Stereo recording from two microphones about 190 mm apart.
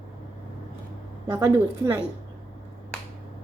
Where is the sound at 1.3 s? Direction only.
15° right (ahead or behind).